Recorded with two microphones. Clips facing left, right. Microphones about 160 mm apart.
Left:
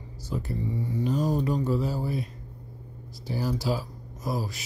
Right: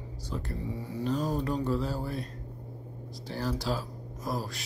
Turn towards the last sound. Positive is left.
turn(degrees=5)  # may be behind; listen again after turning